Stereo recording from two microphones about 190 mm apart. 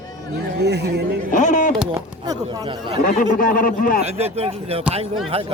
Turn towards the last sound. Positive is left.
turn(degrees=-30)  # may be behind; listen again after turning